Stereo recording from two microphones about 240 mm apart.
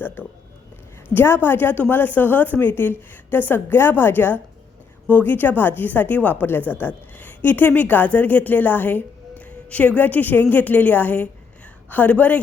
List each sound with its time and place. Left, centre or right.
0.0 s a woman's voice: centre